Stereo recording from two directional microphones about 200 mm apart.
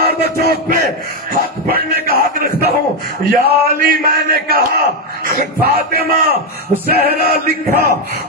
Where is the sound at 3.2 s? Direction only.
45° right (ahead or behind).